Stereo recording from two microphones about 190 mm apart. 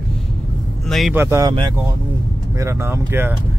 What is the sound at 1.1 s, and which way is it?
Speech, 15° right (ahead or behind).